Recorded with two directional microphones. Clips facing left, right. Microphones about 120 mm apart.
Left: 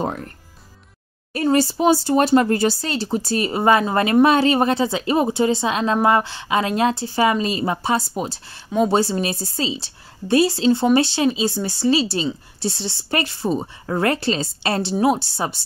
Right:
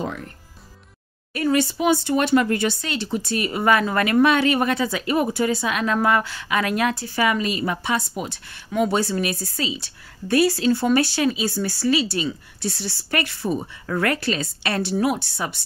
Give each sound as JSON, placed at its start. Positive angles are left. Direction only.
{"t": 0.0, "sound": "speech", "side_deg": 40}
{"t": 1.3, "sound": "a woman's voice", "side_deg": 35}